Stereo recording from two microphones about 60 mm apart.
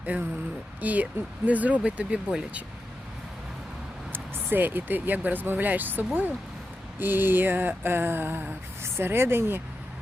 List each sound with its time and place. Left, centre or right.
0.0 s speech: right
4.1 s speech: right